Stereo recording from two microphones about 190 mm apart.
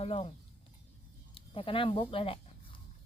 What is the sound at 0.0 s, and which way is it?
Speech, 30° left (ahead or behind).